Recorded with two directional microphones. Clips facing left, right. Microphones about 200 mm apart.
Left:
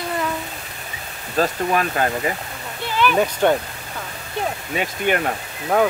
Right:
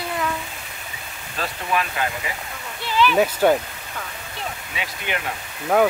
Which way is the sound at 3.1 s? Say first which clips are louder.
Even; 5° right (ahead or behind).